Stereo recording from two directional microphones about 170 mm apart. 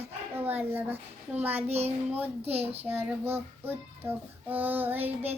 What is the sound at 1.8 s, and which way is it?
Child singing, 10° right (ahead or behind).